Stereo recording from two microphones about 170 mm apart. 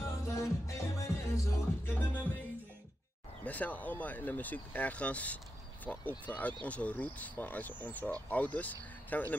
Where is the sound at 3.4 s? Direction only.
10° left (ahead or behind).